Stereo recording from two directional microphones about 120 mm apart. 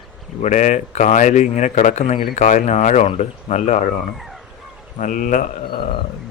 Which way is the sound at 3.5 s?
50° left (ahead or behind).